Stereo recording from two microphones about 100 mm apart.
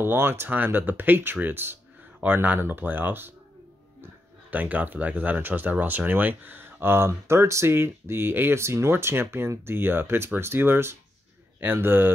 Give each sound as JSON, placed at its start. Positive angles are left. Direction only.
{"t": 0.0, "sound": "speech", "side_deg": -25}